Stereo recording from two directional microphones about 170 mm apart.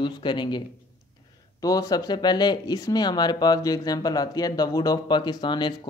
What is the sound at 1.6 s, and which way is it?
Speech, 20° left (ahead or behind).